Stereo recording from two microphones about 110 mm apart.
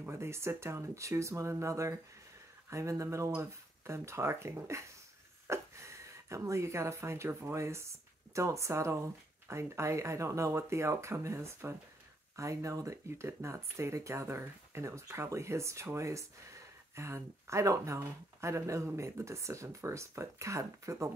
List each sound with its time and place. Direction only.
0.0 s speech: 25° right (ahead or behind)